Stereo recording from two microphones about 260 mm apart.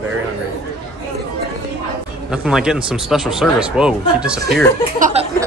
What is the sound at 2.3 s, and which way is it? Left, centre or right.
Speech, centre.